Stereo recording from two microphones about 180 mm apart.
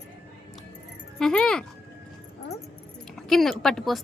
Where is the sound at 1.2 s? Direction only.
5° left (ahead or behind).